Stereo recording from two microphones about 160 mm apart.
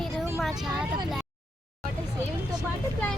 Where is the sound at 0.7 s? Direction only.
5° right (ahead or behind).